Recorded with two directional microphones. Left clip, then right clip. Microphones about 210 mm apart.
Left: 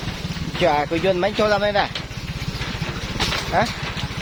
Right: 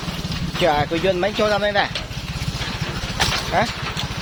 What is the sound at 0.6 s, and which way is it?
Speech, 20° left (ahead or behind).